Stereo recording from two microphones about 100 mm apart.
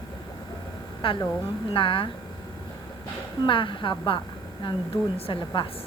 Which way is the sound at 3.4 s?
55° left (ahead or behind).